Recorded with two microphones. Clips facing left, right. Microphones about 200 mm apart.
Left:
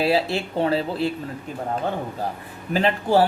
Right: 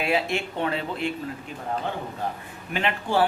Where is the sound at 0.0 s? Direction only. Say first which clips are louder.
Left 4 dB; 35° left (ahead or behind).